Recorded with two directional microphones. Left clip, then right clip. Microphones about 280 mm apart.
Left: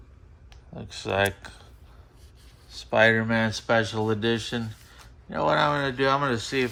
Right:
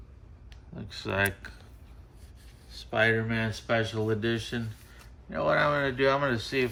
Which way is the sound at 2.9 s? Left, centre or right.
Left.